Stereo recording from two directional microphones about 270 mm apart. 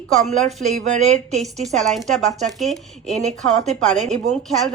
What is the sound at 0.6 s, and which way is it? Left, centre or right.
Speech, right.